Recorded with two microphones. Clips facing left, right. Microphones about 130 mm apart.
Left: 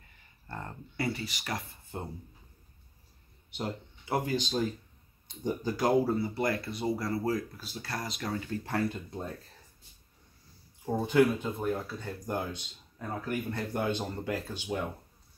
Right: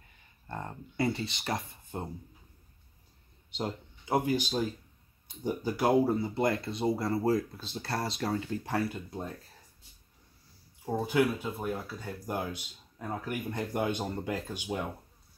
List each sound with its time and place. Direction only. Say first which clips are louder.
0.5 s speech: right 2 dB; 20° right (ahead or behind)
3.4 s speech: right 1 dB; 20° right (ahead or behind)
8.6 s speech: even; 10° right (ahead or behind)
10.9 s speech: left 3 dB; 5° right (ahead or behind)